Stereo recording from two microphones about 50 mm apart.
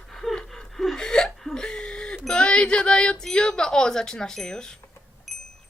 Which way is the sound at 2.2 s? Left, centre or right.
Centre.